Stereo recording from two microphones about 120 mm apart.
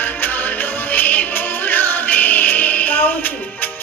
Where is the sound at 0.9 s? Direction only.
15° left (ahead or behind).